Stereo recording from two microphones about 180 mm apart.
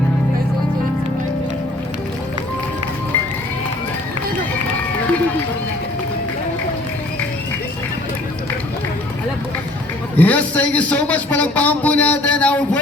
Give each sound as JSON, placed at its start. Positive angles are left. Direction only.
{"t": 10.2, "sound": "a man's voice", "side_deg": 10}